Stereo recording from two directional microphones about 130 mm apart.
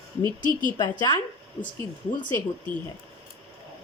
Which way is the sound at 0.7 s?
30° left (ahead or behind).